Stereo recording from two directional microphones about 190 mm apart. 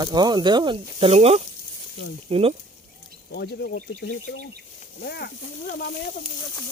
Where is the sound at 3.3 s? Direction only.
60° left (ahead or behind).